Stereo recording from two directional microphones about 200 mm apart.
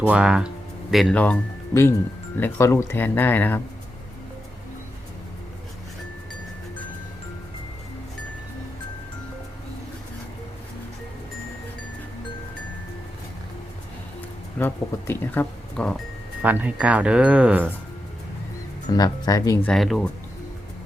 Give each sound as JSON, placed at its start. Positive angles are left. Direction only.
{"t": 0.0, "sound": "speech", "side_deg": -5}
{"t": 14.6, "sound": "speech", "side_deg": 10}
{"t": 16.4, "sound": "speech", "side_deg": -10}
{"t": 18.9, "sound": "speech", "side_deg": 20}
{"t": 19.7, "sound": "speech", "side_deg": 0}